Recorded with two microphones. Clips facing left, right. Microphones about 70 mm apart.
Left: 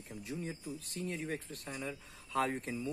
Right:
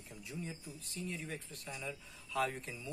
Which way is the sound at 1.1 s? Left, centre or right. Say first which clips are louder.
Left 5 dB; left.